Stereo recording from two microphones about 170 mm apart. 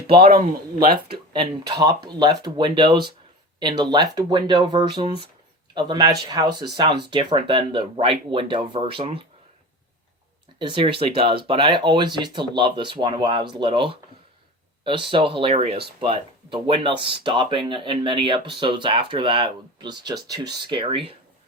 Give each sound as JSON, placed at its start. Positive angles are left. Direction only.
{"t": 0.3, "sound": "speech", "side_deg": -60}
{"t": 1.3, "sound": "speech", "side_deg": -25}
{"t": 10.6, "sound": "speech", "side_deg": -30}